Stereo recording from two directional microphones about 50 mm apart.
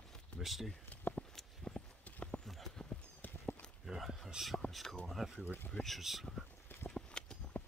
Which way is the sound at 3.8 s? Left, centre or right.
Centre.